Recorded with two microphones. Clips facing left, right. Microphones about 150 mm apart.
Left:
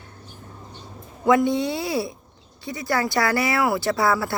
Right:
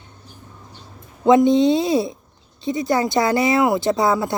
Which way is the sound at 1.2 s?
20° right (ahead or behind).